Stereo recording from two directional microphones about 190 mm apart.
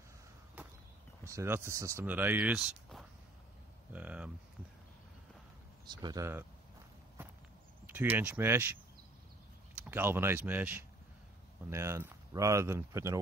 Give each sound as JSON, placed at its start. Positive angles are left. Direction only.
{"t": 0.6, "sound": "walk", "side_deg": -10}
{"t": 1.2, "sound": "speech", "side_deg": -15}
{"t": 5.9, "sound": "speech", "side_deg": -20}
{"t": 7.2, "sound": "walk", "side_deg": -10}
{"t": 7.8, "sound": "speech", "side_deg": -10}
{"t": 9.8, "sound": "speech", "side_deg": -10}